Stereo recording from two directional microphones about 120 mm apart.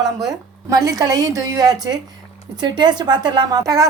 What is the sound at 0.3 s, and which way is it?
A woman's voice, 30° right (ahead or behind).